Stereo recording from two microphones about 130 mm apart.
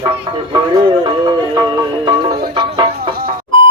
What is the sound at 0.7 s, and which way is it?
Music, 35° right (ahead or behind).